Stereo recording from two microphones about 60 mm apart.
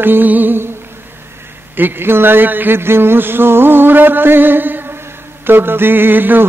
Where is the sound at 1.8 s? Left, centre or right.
Right.